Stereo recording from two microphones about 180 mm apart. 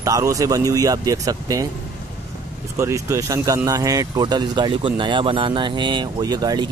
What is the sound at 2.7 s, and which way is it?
Speech, 15° right (ahead or behind).